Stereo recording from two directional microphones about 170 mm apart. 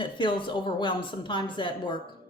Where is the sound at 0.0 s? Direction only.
30° left (ahead or behind).